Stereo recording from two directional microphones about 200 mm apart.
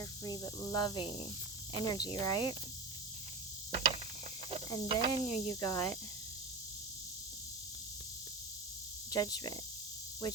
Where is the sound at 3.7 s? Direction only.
30° right (ahead or behind).